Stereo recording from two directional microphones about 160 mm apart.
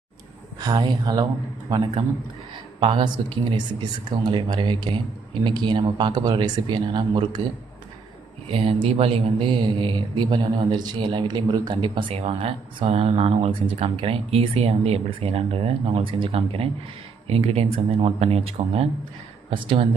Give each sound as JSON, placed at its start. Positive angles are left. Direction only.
{"t": 0.6, "sound": "speech", "side_deg": -25}
{"t": 8.5, "sound": "a man's voice", "side_deg": -35}